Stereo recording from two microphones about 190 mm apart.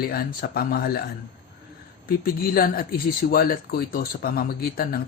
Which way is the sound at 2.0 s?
50° left (ahead or behind).